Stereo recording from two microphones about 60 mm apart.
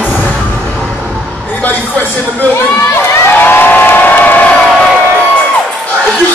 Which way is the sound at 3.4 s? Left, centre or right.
Left.